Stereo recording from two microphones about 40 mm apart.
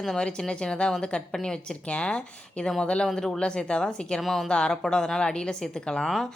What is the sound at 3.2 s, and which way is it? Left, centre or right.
Speech, centre.